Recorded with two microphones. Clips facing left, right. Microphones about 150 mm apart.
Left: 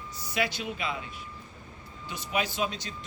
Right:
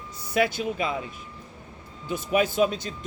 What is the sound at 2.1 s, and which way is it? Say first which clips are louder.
Speech: right 8 dB; 50° right (ahead or behind).